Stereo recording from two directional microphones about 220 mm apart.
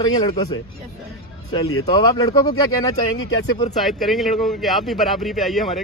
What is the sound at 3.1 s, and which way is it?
Speech, 60° left (ahead or behind).